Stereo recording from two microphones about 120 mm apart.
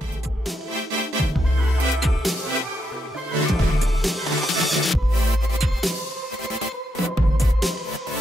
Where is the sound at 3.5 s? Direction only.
Centre (ahead or behind).